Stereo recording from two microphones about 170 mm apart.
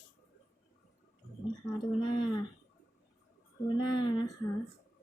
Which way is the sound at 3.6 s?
25° left (ahead or behind).